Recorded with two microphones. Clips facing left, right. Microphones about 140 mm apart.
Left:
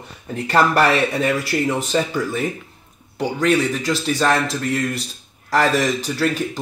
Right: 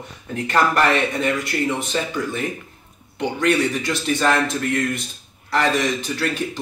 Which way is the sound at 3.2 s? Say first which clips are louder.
Left 1 dB; 40° left (ahead or behind).